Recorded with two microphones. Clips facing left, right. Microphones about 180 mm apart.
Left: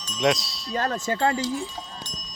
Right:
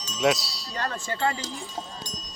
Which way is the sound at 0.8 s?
40° left (ahead or behind).